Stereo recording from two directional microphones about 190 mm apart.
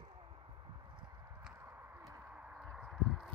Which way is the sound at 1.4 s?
10° right (ahead or behind).